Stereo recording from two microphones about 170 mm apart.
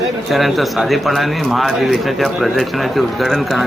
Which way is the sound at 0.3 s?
Centre (ahead or behind).